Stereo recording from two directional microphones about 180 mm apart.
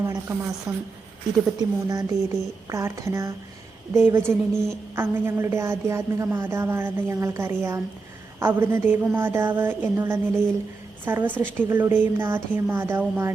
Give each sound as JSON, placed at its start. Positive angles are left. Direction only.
{"t": 0.0, "sound": "a sound", "side_deg": -20}
{"t": 0.7, "sound": "a woman's voice", "side_deg": -5}
{"t": 1.5, "sound": "a woman's voice", "side_deg": -20}